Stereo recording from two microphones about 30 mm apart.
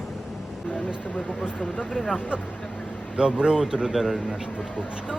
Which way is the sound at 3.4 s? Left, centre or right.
Right.